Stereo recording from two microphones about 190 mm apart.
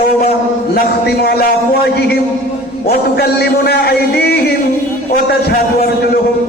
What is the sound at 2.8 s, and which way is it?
A man's voice, 55° left (ahead or behind).